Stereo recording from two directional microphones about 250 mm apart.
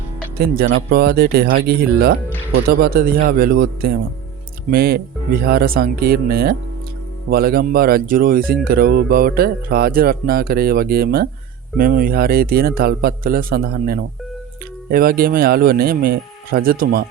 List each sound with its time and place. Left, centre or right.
0.3 s music: right